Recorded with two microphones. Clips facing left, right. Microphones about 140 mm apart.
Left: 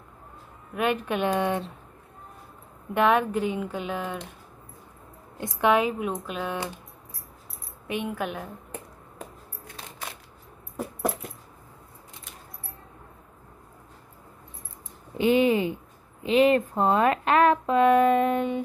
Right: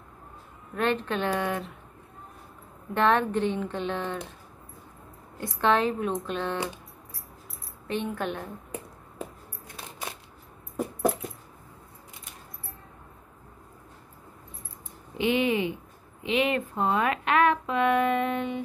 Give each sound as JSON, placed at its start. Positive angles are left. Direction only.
{"t": 0.7, "sound": "speech", "side_deg": 10}
{"t": 2.9, "sound": "speech", "side_deg": 10}
{"t": 5.4, "sound": "speech", "side_deg": 15}
{"t": 7.9, "sound": "speech", "side_deg": 10}
{"t": 15.1, "sound": "speech", "side_deg": 40}